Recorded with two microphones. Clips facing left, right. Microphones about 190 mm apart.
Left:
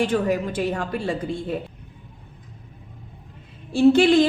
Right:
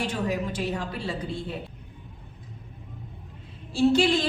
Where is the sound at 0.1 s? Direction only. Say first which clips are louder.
Left 6 dB; 55° left (ahead or behind).